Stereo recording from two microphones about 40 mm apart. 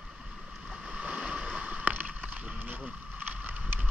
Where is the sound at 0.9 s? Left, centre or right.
Right.